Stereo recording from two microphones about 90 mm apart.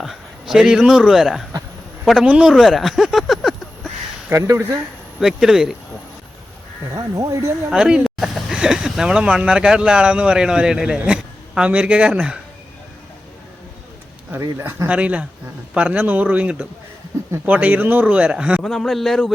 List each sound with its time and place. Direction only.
0.0 s a man's voice: 5° right (ahead or behind)
4.3 s speech: 30° right (ahead or behind)
5.2 s speech: 5° right (ahead or behind)
6.9 s speech: 40° right (ahead or behind)
7.7 s speech: 10° right (ahead or behind)
14.8 s speech: 15° right (ahead or behind)
18.6 s speech: 5° left (ahead or behind)